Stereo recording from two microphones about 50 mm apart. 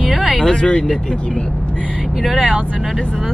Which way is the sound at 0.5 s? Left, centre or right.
Centre.